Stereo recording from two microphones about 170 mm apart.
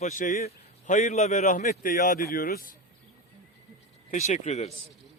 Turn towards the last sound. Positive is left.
turn(degrees=40)  # may be behind; listen again after turning